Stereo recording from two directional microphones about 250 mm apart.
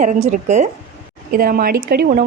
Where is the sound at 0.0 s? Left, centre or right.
Right.